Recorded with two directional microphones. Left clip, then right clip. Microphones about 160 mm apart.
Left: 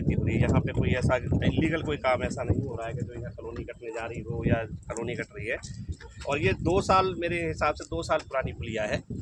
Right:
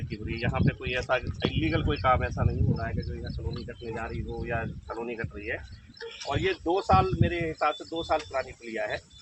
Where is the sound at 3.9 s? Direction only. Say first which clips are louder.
Even; 25° left (ahead or behind).